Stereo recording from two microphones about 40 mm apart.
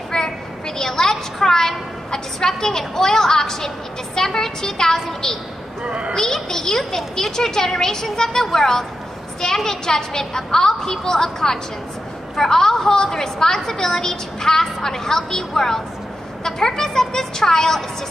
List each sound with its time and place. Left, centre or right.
0.1 s a sound: centre
0.7 s a woman's voice: centre
5.9 s a child's voice: right
6.1 s a woman's voice: centre